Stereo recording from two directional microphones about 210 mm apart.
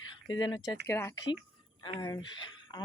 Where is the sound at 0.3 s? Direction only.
20° left (ahead or behind).